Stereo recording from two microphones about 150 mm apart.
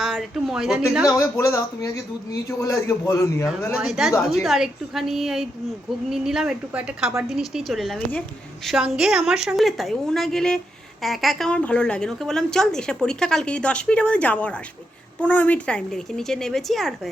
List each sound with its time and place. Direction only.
0.0 s speech: centre (ahead or behind)
1.0 s a man's voice: 20° left (ahead or behind)
3.8 s a woman's voice: centre (ahead or behind)